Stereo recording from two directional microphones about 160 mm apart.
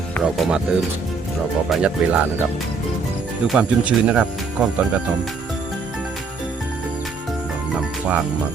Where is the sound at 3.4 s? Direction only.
5° right (ahead or behind).